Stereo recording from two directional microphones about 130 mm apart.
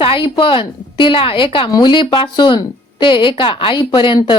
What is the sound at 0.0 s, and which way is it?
A woman's voice, 40° left (ahead or behind).